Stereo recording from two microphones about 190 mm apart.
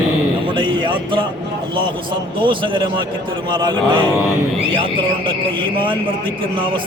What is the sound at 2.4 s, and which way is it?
A man's voice, 25° right (ahead or behind).